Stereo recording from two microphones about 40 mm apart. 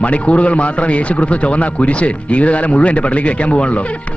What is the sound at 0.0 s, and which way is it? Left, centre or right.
A man's voice, left.